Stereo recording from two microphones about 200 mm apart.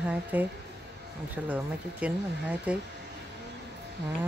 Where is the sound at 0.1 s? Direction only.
10° right (ahead or behind).